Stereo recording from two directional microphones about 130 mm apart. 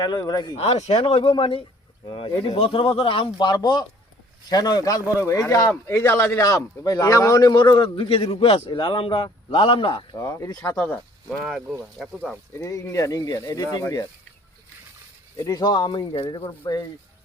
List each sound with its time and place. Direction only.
0.0 s speech: 30° left (ahead or behind)
0.6 s a man's voice: 55° left (ahead or behind)
10.2 s speech: 25° left (ahead or behind)
10.8 s speech: 10° left (ahead or behind)
12.5 s speech: 25° left (ahead or behind)
15.4 s speech: 30° left (ahead or behind)